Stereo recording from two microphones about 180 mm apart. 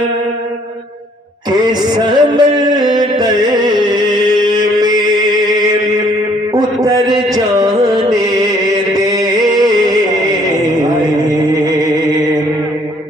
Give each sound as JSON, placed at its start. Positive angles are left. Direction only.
{"t": 1.5, "sound": "music", "side_deg": -25}
{"t": 3.8, "sound": "chant", "side_deg": -20}
{"t": 6.8, "sound": "music", "side_deg": -20}
{"t": 11.6, "sound": "music", "side_deg": -20}